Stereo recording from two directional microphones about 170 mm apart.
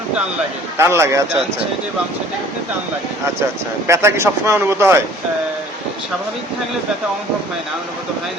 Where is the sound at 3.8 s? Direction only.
15° right (ahead or behind).